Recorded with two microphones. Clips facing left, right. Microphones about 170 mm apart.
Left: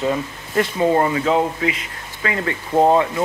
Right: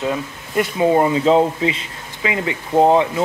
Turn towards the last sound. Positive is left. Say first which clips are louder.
# right 1 dB
turn(degrees=-15)  # may be behind; listen again after turning